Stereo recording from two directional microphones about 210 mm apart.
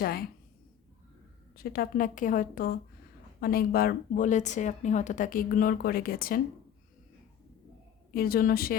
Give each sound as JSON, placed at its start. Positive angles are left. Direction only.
{"t": 0.0, "sound": "a woman's voice", "side_deg": 45}
{"t": 1.5, "sound": "a woman's voice", "side_deg": 45}
{"t": 8.1, "sound": "a woman's voice", "side_deg": 45}